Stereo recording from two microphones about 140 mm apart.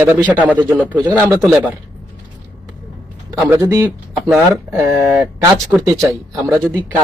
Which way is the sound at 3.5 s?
20° right (ahead or behind).